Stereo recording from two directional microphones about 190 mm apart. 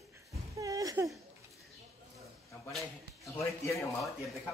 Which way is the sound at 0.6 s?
15° right (ahead or behind).